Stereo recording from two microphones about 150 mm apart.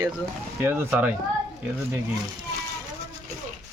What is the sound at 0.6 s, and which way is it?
Speech, 15° right (ahead or behind).